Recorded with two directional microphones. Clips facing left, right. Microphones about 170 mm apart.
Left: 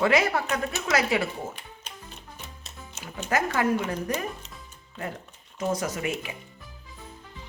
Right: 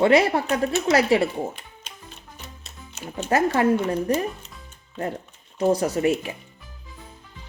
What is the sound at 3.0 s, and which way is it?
Speech, 30° right (ahead or behind).